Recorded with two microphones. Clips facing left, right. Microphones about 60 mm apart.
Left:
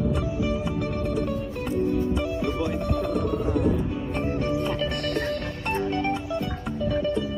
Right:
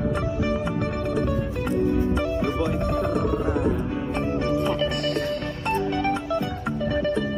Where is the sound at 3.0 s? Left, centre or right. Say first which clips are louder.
Right 2 dB; right.